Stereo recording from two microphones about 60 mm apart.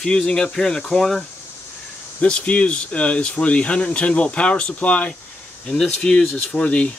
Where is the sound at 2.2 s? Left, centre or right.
Centre.